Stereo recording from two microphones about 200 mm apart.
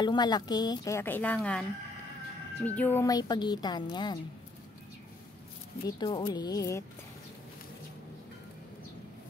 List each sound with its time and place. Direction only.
0.0 s a woman's voice: 20° left (ahead or behind)
2.6 s speech: 10° left (ahead or behind)
5.9 s speech: 20° left (ahead or behind)